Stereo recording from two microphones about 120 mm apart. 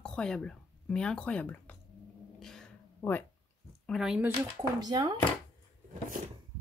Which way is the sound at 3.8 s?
Centre (ahead or behind).